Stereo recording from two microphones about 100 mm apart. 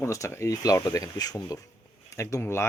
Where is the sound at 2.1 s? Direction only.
30° left (ahead or behind).